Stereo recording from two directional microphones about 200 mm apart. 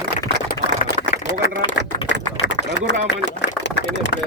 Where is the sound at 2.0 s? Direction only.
65° left (ahead or behind).